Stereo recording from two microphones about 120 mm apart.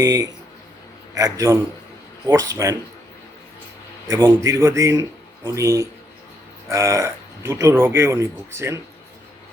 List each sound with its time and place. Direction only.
0.0 s speech: 30° right (ahead or behind)
4.1 s speech: 20° right (ahead or behind)